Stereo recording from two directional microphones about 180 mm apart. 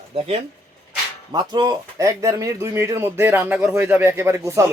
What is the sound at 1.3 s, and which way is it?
Speech, 25° right (ahead or behind).